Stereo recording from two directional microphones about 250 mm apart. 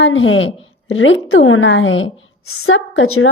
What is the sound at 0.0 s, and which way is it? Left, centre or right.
A woman's voice, left.